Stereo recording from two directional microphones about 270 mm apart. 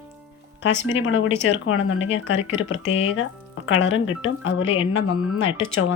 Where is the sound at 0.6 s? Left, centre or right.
Left.